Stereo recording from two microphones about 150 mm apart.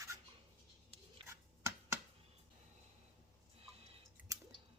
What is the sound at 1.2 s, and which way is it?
Finger snapping, 35° right (ahead or behind).